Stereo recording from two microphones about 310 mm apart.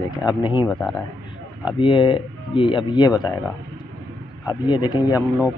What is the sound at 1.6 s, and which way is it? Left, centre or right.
Speech, centre.